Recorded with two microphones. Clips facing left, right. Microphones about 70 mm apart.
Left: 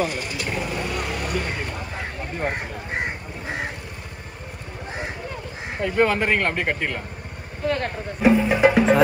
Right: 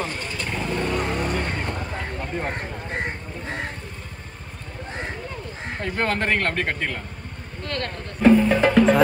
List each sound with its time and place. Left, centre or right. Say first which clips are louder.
0.0 s vehicle: left 3 dB; centre
5.8 s speech: left 5 dB; centre